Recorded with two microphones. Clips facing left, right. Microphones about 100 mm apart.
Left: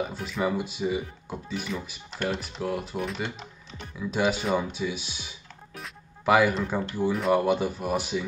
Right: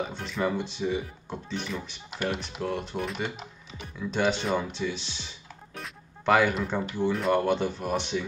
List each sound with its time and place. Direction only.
0.0 s speech: 5° left (ahead or behind)